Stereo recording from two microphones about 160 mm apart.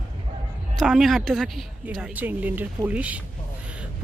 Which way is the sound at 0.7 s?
Centre (ahead or behind).